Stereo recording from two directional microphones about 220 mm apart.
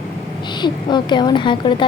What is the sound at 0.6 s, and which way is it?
A woman's voice, 20° left (ahead or behind).